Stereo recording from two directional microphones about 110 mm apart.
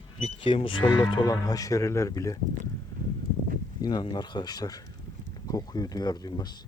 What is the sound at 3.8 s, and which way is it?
Speech, 40° left (ahead or behind).